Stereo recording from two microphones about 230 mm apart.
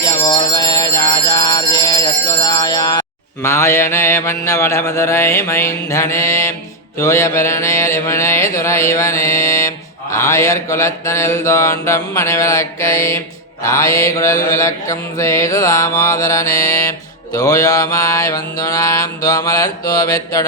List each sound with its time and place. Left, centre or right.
0.3 s bell: centre
3.4 s mantra: centre